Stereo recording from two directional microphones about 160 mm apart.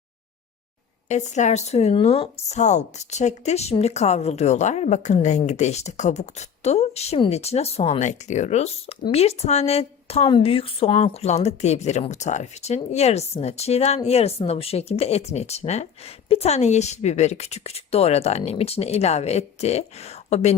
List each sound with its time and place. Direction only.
1.0 s a woman's voice: 45° left (ahead or behind)